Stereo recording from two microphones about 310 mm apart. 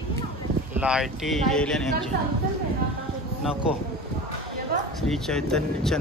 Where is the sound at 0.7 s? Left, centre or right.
Centre.